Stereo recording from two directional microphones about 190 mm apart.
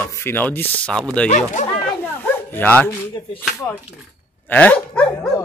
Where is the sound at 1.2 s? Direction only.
40° left (ahead or behind).